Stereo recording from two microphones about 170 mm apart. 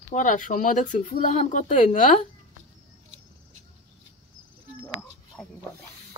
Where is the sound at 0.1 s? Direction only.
45° left (ahead or behind).